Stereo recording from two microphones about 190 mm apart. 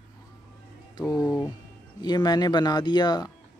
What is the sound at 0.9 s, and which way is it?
Speech, 20° left (ahead or behind).